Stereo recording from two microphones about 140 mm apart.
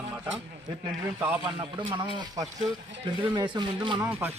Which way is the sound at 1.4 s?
35° right (ahead or behind).